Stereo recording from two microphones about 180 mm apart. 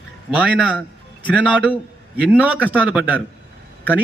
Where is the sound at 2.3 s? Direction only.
5° right (ahead or behind).